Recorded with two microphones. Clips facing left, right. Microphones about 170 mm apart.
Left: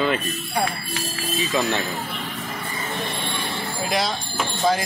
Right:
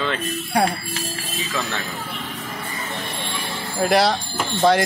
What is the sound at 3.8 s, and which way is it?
Speech, 70° right (ahead or behind).